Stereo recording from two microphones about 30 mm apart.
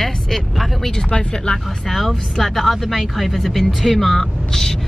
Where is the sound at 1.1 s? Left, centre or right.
Left.